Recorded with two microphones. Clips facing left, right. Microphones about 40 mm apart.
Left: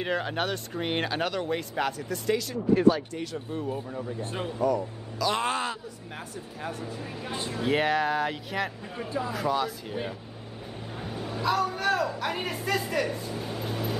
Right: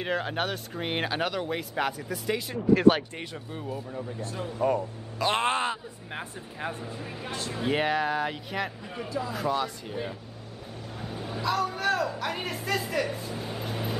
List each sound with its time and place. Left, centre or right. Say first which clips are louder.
0.0 s speech: even; centre
4.2 s speech: left 3 dB; left
4.6 s a man's voice: right 1 dB; right
6.8 s speech: left 1 dB; centre
7.2 s speech: left 1 dB; centre
7.5 s speech: left 1 dB; centre
11.1 s a man's voice: left 2 dB; centre